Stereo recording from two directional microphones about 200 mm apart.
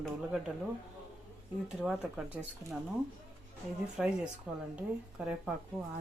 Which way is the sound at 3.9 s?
5° right (ahead or behind).